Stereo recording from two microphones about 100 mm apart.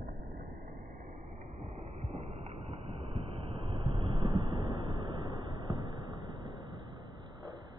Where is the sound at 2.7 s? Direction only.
90° right; by 6.5 s 55° right (ahead or behind).